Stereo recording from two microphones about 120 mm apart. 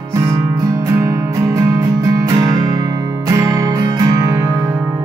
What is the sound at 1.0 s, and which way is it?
Music, 25° right (ahead or behind).